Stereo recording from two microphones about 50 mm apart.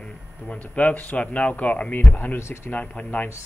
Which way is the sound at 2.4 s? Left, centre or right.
Left.